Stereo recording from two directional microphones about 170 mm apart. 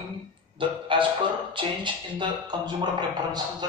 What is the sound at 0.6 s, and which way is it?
Music, 30° right (ahead or behind).